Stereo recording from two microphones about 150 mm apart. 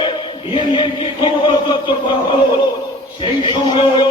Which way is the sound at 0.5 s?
35° left (ahead or behind).